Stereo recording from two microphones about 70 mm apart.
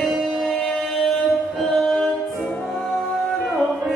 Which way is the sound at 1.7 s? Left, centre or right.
Centre.